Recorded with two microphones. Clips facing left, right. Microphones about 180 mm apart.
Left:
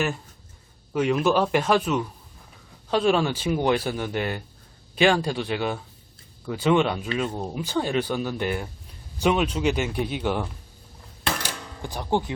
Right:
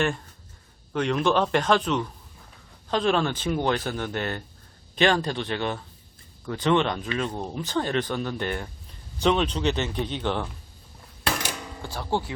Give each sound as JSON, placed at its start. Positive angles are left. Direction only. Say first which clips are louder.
{"t": 0.9, "sound": "speech", "louder": "left 2 dB", "side_deg": 5}
{"t": 11.8, "sound": "speech", "louder": "left 3 dB", "side_deg": 15}